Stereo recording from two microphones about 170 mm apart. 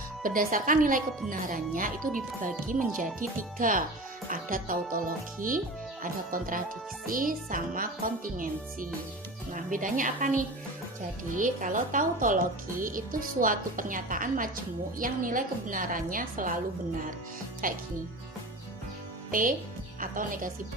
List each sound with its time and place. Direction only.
0.2 s a woman's voice: 55° right (ahead or behind)
3.0 s a woman's voice: 50° right (ahead or behind)
17.6 s a woman's voice: 55° right (ahead or behind)
19.3 s a child's voice: 50° right (ahead or behind)